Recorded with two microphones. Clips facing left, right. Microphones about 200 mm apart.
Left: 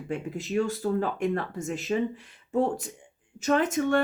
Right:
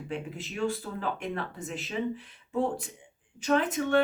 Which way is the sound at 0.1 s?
45° left (ahead or behind).